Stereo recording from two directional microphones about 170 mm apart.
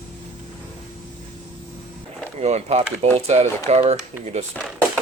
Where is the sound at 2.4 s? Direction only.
40° right (ahead or behind).